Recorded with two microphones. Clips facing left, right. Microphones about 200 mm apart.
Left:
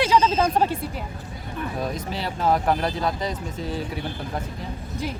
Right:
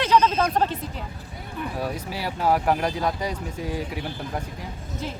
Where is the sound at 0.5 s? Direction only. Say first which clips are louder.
Left 2 dB; 10° left (ahead or behind).